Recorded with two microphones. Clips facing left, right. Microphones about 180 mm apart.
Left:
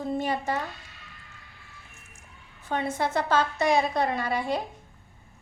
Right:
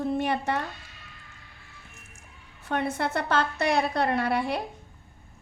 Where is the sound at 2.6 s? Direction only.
65° right (ahead or behind).